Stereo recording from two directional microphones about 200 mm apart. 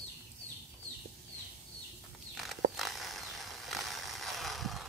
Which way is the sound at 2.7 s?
Centre (ahead or behind).